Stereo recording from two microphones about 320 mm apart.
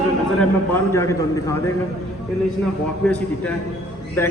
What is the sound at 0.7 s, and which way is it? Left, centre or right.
Speech, centre.